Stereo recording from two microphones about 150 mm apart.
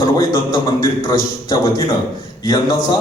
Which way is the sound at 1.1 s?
25° left (ahead or behind).